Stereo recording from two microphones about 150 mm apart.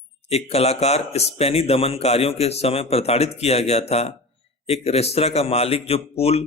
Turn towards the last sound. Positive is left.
turn(degrees=40)  # may be behind; listen again after turning